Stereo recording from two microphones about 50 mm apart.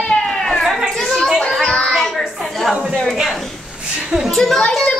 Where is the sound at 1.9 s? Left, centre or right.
Centre.